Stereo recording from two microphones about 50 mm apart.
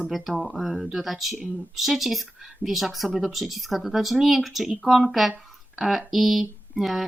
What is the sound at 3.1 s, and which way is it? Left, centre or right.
Speech, centre.